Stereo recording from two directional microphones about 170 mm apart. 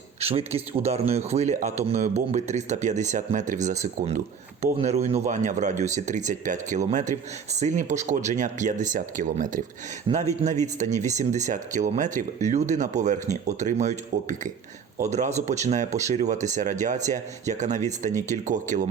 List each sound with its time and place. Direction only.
0.2 s speech: 35° right (ahead or behind)